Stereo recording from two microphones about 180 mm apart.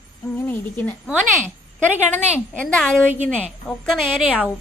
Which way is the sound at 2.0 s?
10° left (ahead or behind).